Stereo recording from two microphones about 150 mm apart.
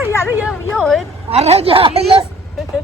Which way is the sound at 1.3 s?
45° right (ahead or behind).